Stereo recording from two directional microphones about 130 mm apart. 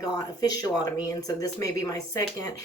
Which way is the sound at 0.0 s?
30° left (ahead or behind).